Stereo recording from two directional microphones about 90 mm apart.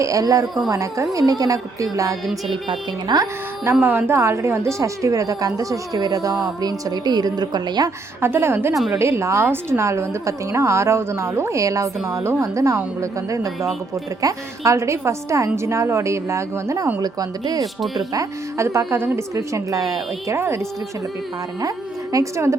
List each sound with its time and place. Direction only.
0.0 s a woman's voice: 40° right (ahead or behind)
2.5 s speech: 55° right (ahead or behind)
3.8 s a woman's voice: 25° right (ahead or behind); by 7.9 s 50° right (ahead or behind)
8.2 s a woman's voice: 25° right (ahead or behind)
17.0 s speech: 45° right (ahead or behind)
17.6 s speech: centre (ahead or behind)
17.9 s a woman's voice: 40° right (ahead or behind)
22.1 s a woman's voice: 35° right (ahead or behind)